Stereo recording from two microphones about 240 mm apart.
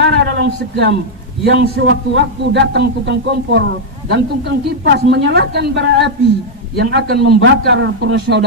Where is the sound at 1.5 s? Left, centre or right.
Right.